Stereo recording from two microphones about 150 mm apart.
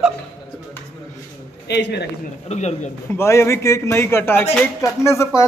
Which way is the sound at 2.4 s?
45° left (ahead or behind).